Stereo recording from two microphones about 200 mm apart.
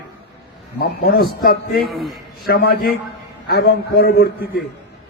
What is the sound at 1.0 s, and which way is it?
A man's voice, 50° left (ahead or behind).